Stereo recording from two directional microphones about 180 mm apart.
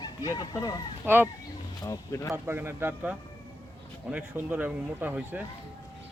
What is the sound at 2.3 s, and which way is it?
A man's voice, 15° right (ahead or behind).